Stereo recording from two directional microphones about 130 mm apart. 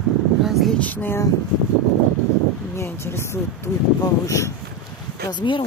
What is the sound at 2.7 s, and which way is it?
Speech, 20° left (ahead or behind).